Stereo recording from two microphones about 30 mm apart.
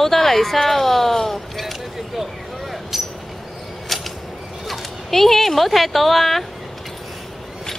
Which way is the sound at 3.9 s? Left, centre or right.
Centre.